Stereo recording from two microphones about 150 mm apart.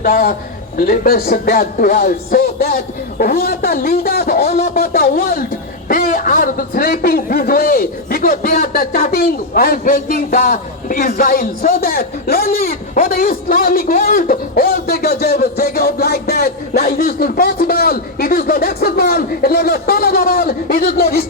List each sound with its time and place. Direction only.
0.0 s a man's voice: 75° left (ahead or behind)